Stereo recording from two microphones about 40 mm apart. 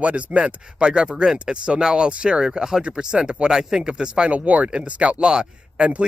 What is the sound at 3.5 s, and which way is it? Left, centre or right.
Speech, centre.